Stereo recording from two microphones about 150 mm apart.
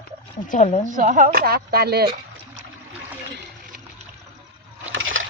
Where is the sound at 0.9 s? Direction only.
60° right (ahead or behind); by 2.1 s 90° right.